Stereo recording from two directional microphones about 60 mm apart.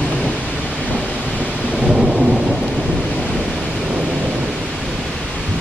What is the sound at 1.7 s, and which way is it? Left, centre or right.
Thunder, centre.